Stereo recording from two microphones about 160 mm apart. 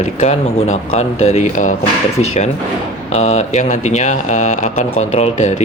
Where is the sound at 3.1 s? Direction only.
45° left (ahead or behind).